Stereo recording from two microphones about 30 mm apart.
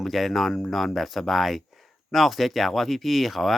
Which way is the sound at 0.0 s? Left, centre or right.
Centre.